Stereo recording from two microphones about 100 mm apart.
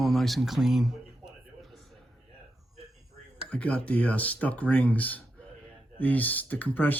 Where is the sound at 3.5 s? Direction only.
15° left (ahead or behind).